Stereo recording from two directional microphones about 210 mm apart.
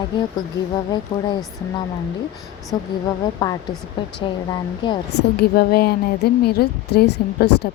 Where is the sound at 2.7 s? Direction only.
20° left (ahead or behind).